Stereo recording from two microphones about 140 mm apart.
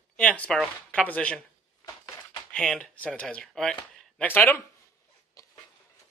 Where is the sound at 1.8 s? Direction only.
25° left (ahead or behind).